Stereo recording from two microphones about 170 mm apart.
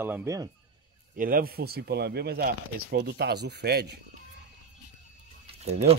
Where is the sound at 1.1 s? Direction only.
55° right (ahead or behind); by 3.9 s 75° right (ahead or behind).